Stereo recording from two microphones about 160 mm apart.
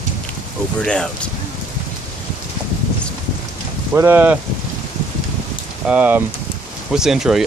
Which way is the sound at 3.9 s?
15° right (ahead or behind).